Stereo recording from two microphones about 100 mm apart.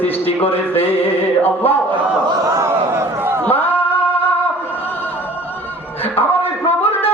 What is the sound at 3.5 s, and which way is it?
Singing, 20° left (ahead or behind).